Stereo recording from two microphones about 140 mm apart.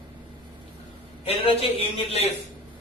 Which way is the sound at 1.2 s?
45° left (ahead or behind).